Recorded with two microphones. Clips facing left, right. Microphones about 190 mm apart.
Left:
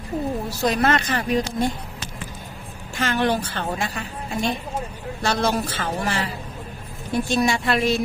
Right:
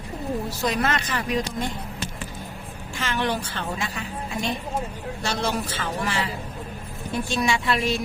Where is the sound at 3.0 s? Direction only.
45° left (ahead or behind).